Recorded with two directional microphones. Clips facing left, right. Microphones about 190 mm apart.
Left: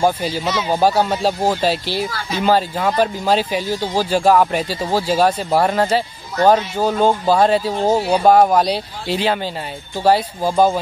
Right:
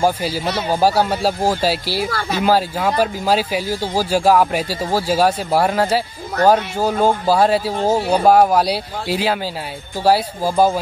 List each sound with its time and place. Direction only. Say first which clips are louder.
0.0 s speech: even; 10° right (ahead or behind)
2.0 s speech: right 2 dB; 55° right (ahead or behind)
2.4 s speech: left 1 dB; 10° right (ahead or behind)